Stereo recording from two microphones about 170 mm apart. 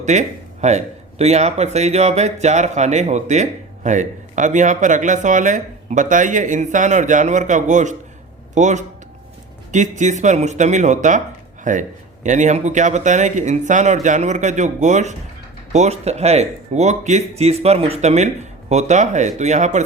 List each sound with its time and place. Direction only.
0.0 s speech: 45° right (ahead or behind)